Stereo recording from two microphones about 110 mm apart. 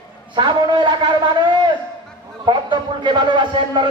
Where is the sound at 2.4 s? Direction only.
45° right (ahead or behind).